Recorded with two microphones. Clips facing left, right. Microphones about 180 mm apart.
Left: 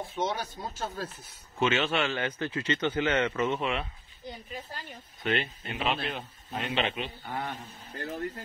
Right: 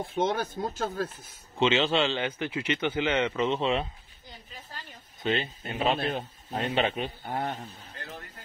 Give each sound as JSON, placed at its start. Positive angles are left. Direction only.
{"t": 0.1, "sound": "speech", "side_deg": -55}
{"t": 1.6, "sound": "speech", "side_deg": -20}
{"t": 5.2, "sound": "a man's voice", "side_deg": -25}